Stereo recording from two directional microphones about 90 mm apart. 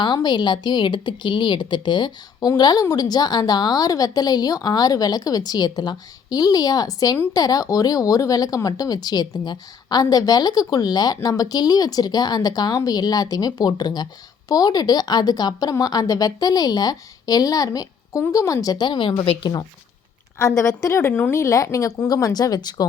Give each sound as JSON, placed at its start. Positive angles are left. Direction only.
{"t": 0.0, "sound": "speech", "side_deg": 55}
{"t": 20.6, "sound": "speech", "side_deg": 35}
{"t": 21.1, "sound": "speech", "side_deg": 20}
{"t": 21.3, "sound": "speech", "side_deg": 35}